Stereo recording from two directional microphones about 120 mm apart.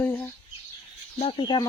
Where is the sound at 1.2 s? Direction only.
45° left (ahead or behind).